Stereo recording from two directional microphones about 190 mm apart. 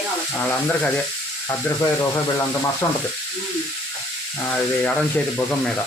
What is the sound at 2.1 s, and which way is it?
Speech, 15° left (ahead or behind).